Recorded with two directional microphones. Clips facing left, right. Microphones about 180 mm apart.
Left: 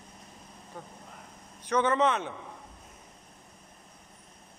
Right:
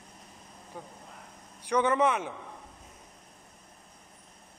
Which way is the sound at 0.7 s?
10° right (ahead or behind).